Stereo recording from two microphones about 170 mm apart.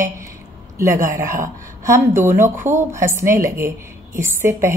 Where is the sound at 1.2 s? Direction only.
50° right (ahead or behind).